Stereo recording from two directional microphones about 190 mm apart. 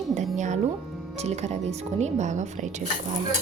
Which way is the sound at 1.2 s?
35° right (ahead or behind).